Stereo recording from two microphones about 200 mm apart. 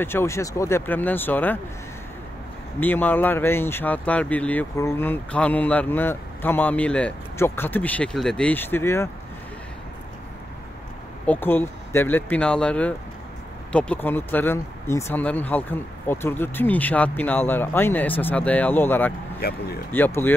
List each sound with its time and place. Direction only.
0.0 s speech: 10° left (ahead or behind)
2.8 s speech: 10° left (ahead or behind)
11.2 s speech: 10° left (ahead or behind)
19.4 s speech: 50° left (ahead or behind)
19.9 s speech: 10° left (ahead or behind)